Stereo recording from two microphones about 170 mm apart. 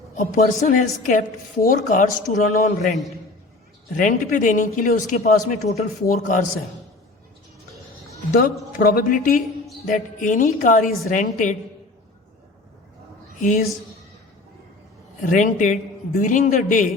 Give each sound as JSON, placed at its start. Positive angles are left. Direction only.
{"t": 0.2, "sound": "a man's voice", "side_deg": 50}
{"t": 8.3, "sound": "a man's voice", "side_deg": 55}
{"t": 15.2, "sound": "a man's voice", "side_deg": 50}